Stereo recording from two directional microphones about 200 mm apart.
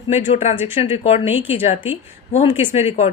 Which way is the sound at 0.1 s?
35° left (ahead or behind).